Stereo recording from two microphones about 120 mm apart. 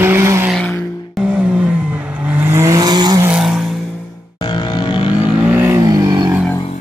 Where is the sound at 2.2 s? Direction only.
15° right (ahead or behind); by 3.2 s 35° right (ahead or behind).